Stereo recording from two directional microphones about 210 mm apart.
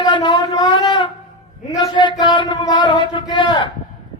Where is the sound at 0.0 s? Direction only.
20° left (ahead or behind).